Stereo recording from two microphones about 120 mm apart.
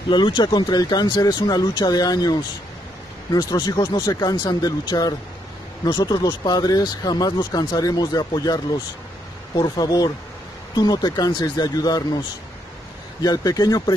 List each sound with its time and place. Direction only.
0.1 s speech: 40° left (ahead or behind)
9.6 s speech: 35° left (ahead or behind)
13.2 s speech: 30° left (ahead or behind)